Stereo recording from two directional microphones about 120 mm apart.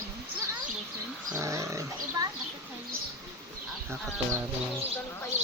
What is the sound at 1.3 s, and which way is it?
Dog, 25° right (ahead or behind).